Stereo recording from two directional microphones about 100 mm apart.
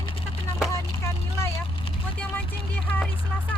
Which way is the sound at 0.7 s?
25° left (ahead or behind).